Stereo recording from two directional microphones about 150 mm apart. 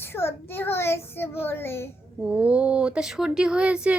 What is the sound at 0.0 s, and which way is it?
A child's voice, 15° left (ahead or behind).